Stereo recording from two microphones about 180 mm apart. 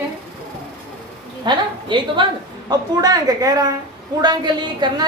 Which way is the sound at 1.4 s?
25° right (ahead or behind).